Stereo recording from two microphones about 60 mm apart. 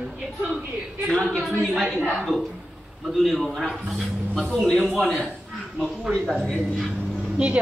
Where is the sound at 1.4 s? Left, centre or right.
Centre.